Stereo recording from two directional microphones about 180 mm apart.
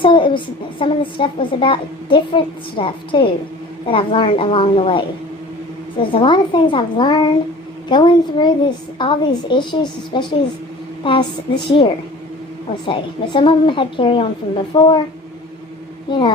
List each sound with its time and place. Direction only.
0.0 s a child's voice: 25° left (ahead or behind)
12.8 s a child's voice: 25° left (ahead or behind)
16.1 s a child's voice: 25° left (ahead or behind)